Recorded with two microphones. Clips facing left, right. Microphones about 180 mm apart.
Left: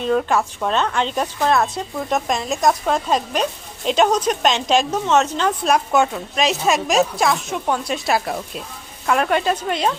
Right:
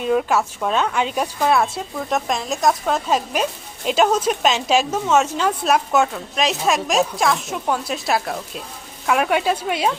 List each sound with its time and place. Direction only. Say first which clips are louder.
0.0 s a woman's voice: even; 5° right (ahead or behind)